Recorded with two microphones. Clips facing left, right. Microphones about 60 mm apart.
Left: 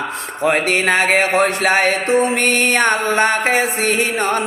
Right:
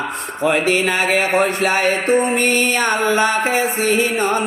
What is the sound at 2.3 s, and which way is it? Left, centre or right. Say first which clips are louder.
Mantra: left 1 dB; left.